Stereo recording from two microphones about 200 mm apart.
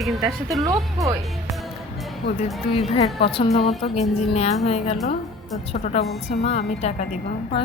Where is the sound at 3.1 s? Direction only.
25° left (ahead or behind).